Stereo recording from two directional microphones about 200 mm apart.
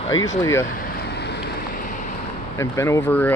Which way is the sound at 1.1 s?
55° left (ahead or behind).